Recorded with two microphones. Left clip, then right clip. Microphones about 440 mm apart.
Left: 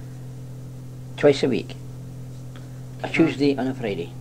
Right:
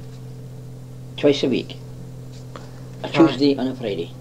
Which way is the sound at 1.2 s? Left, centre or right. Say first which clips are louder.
Even; left.